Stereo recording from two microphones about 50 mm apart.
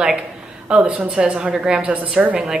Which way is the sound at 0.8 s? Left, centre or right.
Right.